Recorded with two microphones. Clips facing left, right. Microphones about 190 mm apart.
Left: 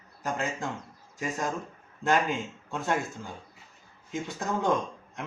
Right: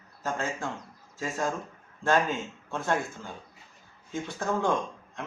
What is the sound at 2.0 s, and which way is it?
Speech, 15° left (ahead or behind).